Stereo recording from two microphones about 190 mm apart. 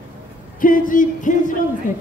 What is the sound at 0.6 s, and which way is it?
Speech, 45° left (ahead or behind).